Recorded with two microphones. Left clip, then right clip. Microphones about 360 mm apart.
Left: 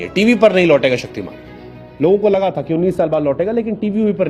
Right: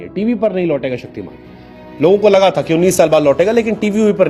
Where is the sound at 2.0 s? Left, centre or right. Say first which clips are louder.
Right 4 dB; centre.